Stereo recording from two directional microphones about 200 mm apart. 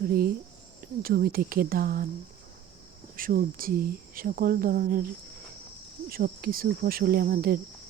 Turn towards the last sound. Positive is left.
turn(degrees=-50)  # may be behind; listen again after turning